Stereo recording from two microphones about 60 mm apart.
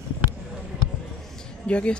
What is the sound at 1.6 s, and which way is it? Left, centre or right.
Speech, centre.